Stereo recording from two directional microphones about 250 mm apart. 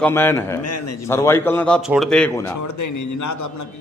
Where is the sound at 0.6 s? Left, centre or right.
Left.